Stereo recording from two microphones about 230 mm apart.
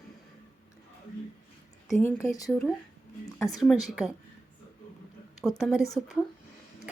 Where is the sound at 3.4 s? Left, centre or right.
Centre.